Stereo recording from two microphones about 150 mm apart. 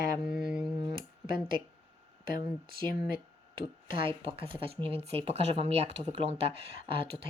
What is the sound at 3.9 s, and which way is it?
Speech, 40° right (ahead or behind).